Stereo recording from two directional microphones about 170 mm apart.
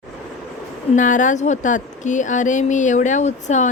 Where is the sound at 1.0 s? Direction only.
50° left (ahead or behind).